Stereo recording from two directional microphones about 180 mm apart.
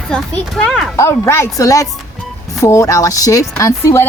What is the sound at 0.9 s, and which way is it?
A woman's voice, 15° left (ahead or behind).